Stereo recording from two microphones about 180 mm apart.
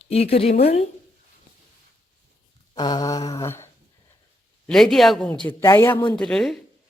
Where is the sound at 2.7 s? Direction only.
20° left (ahead or behind).